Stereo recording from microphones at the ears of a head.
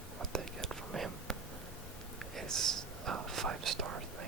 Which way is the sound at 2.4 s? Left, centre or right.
Right.